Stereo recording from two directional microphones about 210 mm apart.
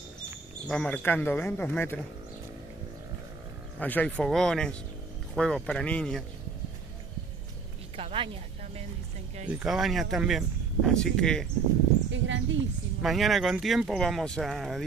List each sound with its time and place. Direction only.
0.7 s speech: 5° left (ahead or behind)
3.8 s speech: 5° left (ahead or behind)
7.9 s a sound: 25° right (ahead or behind)
9.5 s speech: 5° right (ahead or behind)
12.1 s speech: 60° right (ahead or behind)
13.0 s speech: centre (ahead or behind)